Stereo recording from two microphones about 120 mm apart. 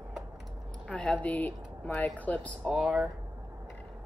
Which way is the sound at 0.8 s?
10° left (ahead or behind).